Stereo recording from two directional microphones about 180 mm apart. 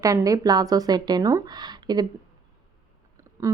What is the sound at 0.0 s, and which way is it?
A woman's voice, 20° right (ahead or behind).